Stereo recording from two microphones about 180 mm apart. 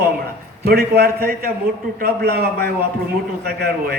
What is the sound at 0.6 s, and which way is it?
A man's voice, 60° right (ahead or behind).